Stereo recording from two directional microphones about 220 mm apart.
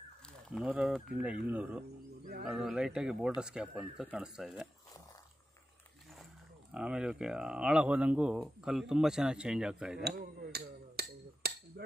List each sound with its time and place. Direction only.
0.5 s speech: 5° right (ahead or behind)
6.7 s speech: 5° right (ahead or behind)
10.0 s a sound: 45° right (ahead or behind)